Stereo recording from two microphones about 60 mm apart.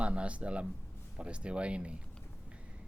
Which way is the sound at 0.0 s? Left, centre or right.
Centre.